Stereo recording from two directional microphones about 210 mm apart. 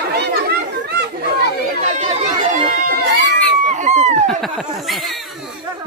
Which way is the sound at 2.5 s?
40° right (ahead or behind).